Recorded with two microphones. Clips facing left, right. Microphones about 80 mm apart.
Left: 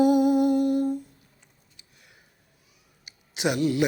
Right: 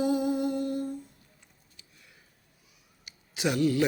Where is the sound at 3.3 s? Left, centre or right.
Left.